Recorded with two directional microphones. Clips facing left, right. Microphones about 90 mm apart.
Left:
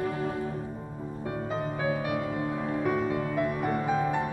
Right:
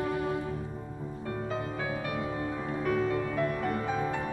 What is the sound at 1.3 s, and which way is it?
Music, 15° left (ahead or behind).